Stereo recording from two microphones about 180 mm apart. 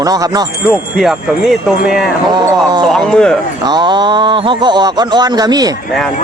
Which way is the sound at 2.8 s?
Centre (ahead or behind).